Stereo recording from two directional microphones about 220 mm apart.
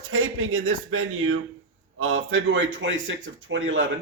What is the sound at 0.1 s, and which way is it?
A man's voice, 70° right (ahead or behind).